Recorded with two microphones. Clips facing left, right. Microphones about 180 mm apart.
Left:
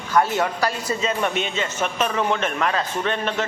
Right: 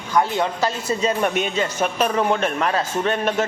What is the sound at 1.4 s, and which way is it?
A man's voice, 40° right (ahead or behind).